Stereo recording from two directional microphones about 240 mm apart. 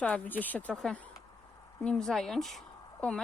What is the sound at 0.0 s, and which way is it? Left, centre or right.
A woman's voice, centre.